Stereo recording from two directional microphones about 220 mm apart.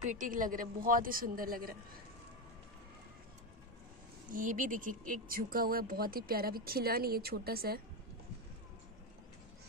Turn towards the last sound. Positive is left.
turn(degrees=-45)  # may be behind; listen again after turning